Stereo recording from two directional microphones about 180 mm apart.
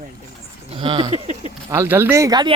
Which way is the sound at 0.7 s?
30° right (ahead or behind).